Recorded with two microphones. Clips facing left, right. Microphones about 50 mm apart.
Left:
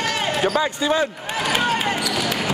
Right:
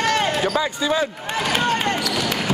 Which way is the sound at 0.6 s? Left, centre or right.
Left.